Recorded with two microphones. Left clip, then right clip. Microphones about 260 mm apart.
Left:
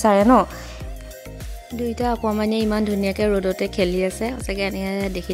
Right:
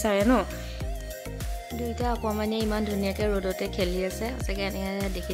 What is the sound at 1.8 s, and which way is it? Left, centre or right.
A woman's voice, left.